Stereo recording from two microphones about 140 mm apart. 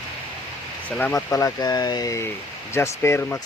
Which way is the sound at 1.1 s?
20° left (ahead or behind).